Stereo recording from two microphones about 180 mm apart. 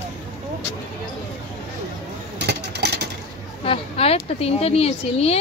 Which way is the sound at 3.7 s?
35° left (ahead or behind).